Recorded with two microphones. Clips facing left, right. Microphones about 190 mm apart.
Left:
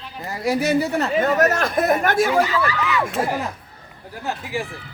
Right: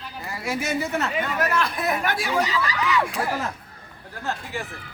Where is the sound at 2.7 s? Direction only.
Centre (ahead or behind).